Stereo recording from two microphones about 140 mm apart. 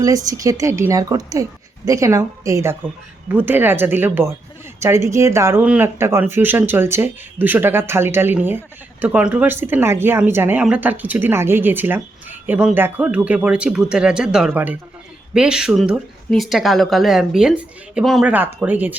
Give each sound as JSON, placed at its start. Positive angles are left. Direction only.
{"t": 0.0, "sound": "speech", "side_deg": -25}